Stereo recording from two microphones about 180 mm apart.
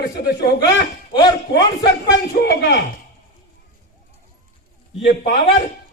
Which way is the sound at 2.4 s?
70° left (ahead or behind).